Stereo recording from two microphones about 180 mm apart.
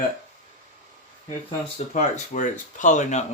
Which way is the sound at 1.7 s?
40° left (ahead or behind).